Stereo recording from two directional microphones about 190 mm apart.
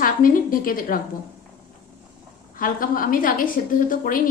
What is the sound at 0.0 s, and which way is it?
A woman's voice, 50° left (ahead or behind).